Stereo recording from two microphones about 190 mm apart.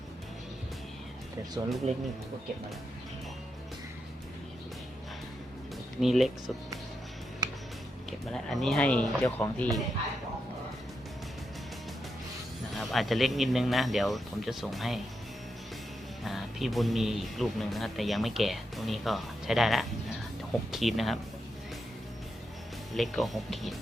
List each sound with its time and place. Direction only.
1.6 s speech: 15° right (ahead or behind)
6.0 s speech: centre (ahead or behind)
8.3 s speech: centre (ahead or behind)
12.7 s speech: centre (ahead or behind)
16.2 s speech: centre (ahead or behind)
23.0 s speech: centre (ahead or behind)